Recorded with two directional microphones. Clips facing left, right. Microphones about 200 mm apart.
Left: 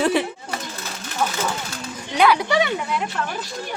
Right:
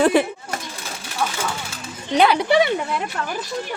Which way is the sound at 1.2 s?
10° left (ahead or behind).